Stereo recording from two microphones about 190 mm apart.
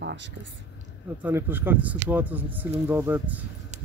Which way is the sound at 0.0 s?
70° right (ahead or behind).